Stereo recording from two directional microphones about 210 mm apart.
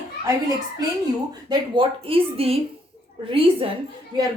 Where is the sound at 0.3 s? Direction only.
15° right (ahead or behind).